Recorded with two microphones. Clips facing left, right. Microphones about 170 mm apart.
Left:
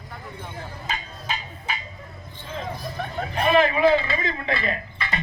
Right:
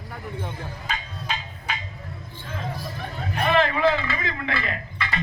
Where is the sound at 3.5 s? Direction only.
15° left (ahead or behind).